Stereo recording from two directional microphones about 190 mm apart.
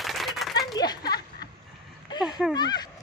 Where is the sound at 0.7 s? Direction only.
20° left (ahead or behind).